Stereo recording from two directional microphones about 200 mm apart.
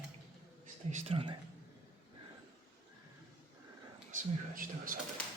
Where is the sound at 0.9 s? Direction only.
30° right (ahead or behind).